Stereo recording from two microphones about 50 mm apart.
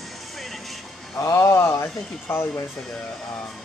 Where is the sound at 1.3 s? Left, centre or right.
Left.